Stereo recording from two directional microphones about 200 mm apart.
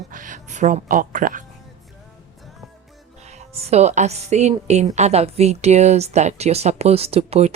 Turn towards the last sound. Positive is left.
turn(degrees=-30)  # may be behind; listen again after turning